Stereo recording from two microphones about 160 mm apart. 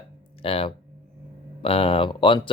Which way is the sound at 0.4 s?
35° left (ahead or behind).